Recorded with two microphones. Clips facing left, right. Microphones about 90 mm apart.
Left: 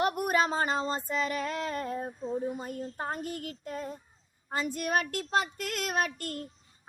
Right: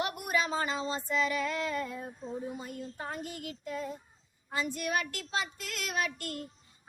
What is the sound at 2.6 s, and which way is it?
Speech, 45° left (ahead or behind).